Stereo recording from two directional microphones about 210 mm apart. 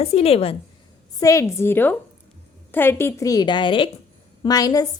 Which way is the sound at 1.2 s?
15° left (ahead or behind).